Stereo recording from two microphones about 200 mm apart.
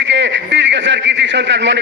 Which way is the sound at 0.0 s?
60° right (ahead or behind).